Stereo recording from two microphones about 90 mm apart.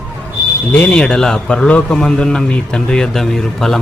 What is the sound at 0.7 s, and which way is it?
A man's voice, 15° left (ahead or behind).